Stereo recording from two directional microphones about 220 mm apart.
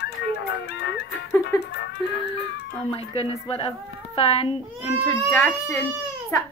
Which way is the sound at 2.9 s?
25° left (ahead or behind).